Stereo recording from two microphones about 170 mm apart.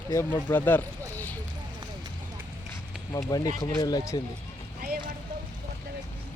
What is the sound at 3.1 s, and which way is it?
Speech, 20° left (ahead or behind).